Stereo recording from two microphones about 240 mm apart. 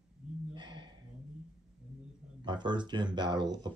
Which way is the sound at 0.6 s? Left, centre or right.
Centre.